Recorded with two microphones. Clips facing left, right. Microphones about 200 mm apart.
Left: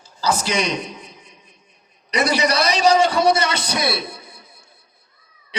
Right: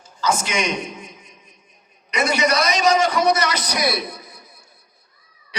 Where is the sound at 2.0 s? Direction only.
35° left (ahead or behind).